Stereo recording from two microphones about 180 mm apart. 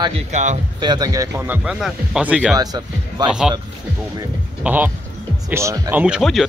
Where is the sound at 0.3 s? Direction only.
40° right (ahead or behind).